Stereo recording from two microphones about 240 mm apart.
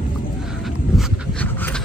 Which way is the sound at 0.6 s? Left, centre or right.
Centre.